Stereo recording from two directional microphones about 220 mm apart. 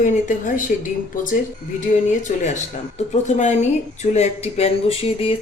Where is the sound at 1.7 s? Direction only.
35° left (ahead or behind).